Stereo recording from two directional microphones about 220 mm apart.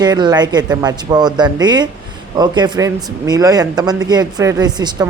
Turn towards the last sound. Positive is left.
turn(degrees=-20)  # may be behind; listen again after turning